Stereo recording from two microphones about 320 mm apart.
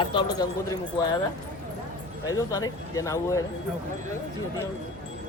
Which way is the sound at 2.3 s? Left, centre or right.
Centre.